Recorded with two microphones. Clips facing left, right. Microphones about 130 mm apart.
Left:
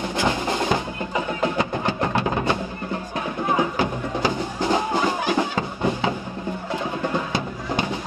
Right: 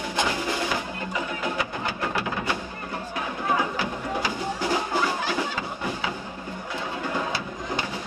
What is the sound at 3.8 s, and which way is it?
Music, 25° left (ahead or behind).